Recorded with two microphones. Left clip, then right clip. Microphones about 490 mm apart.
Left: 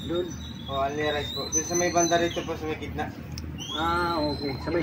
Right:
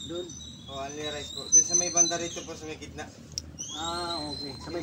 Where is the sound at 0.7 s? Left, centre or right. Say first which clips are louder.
Left 9 dB; right.